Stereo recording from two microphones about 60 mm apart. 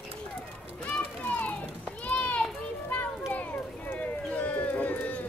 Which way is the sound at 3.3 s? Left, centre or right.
Left.